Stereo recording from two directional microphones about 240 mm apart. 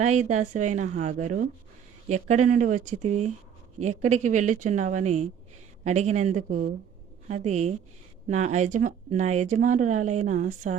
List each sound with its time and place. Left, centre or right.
0.0 s a woman's voice: right